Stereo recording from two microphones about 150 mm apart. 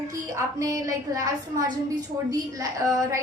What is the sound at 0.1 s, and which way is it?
A woman's voice, 20° right (ahead or behind).